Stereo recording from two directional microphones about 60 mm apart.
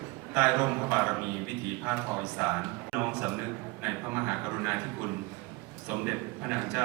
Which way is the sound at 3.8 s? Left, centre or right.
Right.